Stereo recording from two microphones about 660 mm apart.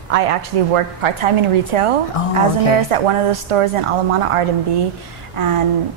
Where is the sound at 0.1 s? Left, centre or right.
Right.